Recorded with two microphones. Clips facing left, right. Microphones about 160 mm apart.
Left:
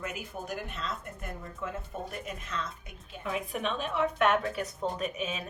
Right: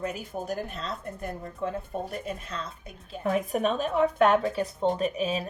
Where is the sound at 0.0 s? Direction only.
35° right (ahead or behind).